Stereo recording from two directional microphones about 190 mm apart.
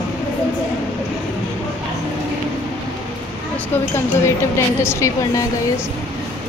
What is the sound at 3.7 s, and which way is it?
A woman's voice, 10° left (ahead or behind).